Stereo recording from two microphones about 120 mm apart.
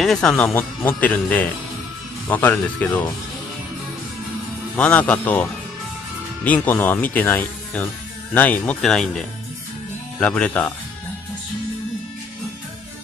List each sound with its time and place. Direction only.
0.0 s speech: centre (ahead or behind)
4.7 s speech: 10° left (ahead or behind)
10.2 s speech: 10° left (ahead or behind)